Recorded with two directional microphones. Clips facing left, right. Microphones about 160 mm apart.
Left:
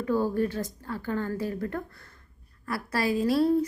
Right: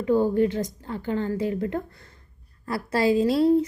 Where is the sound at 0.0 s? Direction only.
20° right (ahead or behind).